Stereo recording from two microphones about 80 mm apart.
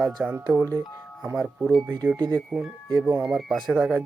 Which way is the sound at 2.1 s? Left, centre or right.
Right.